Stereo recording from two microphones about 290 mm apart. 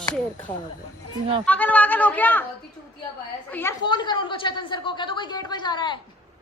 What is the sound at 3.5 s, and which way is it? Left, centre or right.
A woman's voice, centre.